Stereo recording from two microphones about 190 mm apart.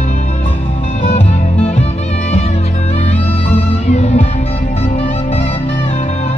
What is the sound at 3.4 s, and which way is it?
Music, 35° left (ahead or behind).